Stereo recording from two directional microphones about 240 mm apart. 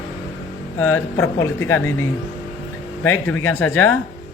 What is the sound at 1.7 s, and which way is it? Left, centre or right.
Speech, centre.